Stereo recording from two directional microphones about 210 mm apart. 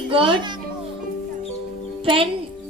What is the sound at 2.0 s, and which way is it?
Speech, 25° right (ahead or behind).